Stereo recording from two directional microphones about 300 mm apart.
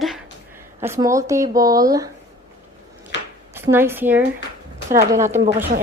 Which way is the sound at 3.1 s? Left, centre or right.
Left.